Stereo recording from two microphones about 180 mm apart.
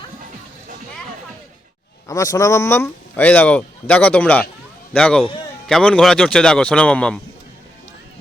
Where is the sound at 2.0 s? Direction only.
20° left (ahead or behind).